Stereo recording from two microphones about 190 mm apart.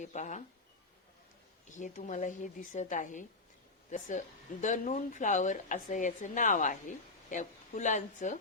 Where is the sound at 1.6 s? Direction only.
40° left (ahead or behind).